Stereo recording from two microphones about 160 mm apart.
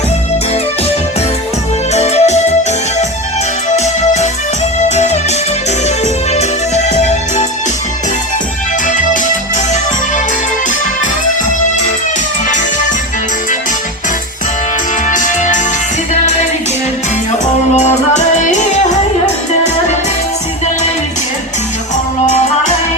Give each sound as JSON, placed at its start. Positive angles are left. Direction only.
{"t": 1.9, "sound": "music", "side_deg": 45}
{"t": 3.8, "sound": "music", "side_deg": 45}
{"t": 6.3, "sound": "music", "side_deg": 45}
{"t": 8.9, "sound": "music", "side_deg": 50}
{"t": 15.0, "sound": "music", "side_deg": 50}
{"t": 17.4, "sound": "music", "side_deg": 45}